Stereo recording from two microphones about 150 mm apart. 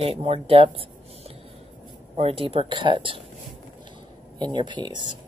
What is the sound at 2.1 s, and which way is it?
Speech, 40° right (ahead or behind).